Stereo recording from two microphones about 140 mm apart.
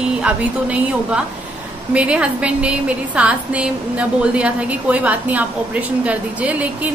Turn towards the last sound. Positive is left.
turn(degrees=-10)  # may be behind; listen again after turning